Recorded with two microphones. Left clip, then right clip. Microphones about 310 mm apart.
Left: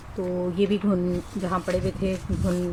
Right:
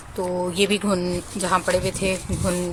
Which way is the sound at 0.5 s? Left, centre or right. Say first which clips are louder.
Right 3 dB; right.